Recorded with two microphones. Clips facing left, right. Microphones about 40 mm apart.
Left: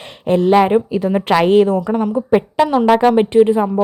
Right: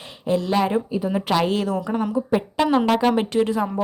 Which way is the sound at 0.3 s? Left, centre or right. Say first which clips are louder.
Left 9 dB; left.